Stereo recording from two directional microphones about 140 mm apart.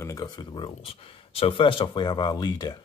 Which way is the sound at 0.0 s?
25° left (ahead or behind).